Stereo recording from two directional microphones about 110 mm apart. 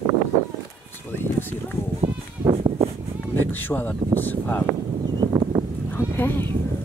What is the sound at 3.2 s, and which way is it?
Speech, 15° left (ahead or behind).